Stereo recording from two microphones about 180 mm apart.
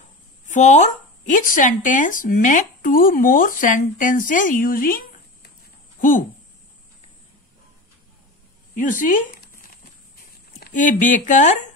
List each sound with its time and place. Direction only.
0.5 s speech: 40° left (ahead or behind)
8.7 s a sound: 45° left (ahead or behind)
10.6 s speech: 45° left (ahead or behind)